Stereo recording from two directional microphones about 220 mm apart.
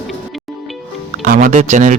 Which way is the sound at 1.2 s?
35° right (ahead or behind).